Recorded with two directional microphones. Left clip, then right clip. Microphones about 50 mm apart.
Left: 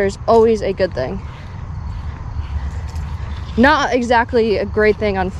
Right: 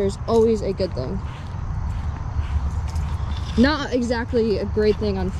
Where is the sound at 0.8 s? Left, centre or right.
Right.